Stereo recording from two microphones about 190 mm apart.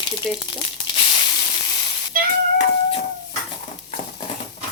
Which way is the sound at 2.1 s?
50° right (ahead or behind).